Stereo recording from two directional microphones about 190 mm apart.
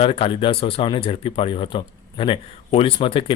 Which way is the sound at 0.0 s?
30° left (ahead or behind).